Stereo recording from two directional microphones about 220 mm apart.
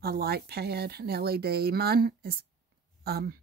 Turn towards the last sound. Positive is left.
turn(degrees=-45)  # may be behind; listen again after turning